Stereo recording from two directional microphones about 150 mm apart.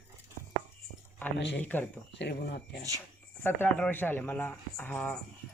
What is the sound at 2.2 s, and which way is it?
Speech, 90° left.